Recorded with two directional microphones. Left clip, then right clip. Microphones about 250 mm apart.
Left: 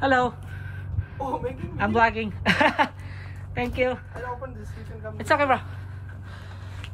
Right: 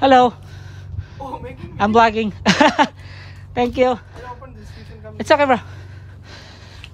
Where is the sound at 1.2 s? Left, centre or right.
Right.